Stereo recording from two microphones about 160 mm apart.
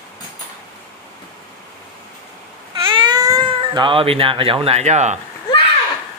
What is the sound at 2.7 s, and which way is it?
Cat, 30° right (ahead or behind).